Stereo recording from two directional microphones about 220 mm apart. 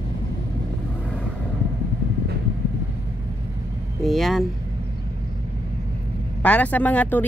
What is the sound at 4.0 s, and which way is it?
Speech, centre (ahead or behind).